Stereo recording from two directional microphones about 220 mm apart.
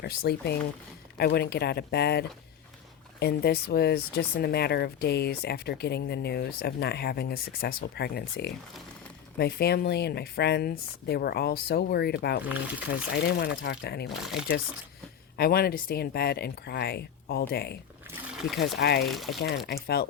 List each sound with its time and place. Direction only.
0.0 s speech: 45° left (ahead or behind)
14.1 s speech: centre (ahead or behind)
15.4 s speech: 45° left (ahead or behind)
18.1 s wild animals: centre (ahead or behind)
18.8 s speech: 45° left (ahead or behind)
19.0 s speech: centre (ahead or behind)
19.6 s speech: 45° left (ahead or behind)